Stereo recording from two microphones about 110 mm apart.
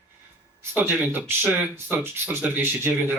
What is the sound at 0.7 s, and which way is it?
Speech, 20° right (ahead or behind).